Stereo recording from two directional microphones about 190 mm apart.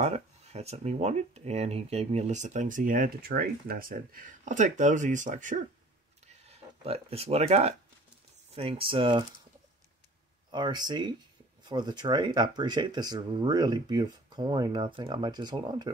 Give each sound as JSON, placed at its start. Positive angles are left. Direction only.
{"t": 0.0, "sound": "speech", "side_deg": -35}
{"t": 6.8, "sound": "speech", "side_deg": -30}
{"t": 10.5, "sound": "speech", "side_deg": -20}